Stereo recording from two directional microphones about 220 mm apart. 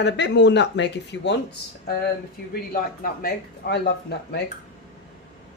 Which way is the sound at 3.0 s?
45° left (ahead or behind).